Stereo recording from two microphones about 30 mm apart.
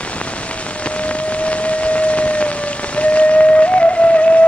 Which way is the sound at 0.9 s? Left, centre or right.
Left.